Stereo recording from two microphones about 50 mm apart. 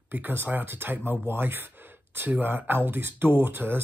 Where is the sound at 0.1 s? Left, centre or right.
Right.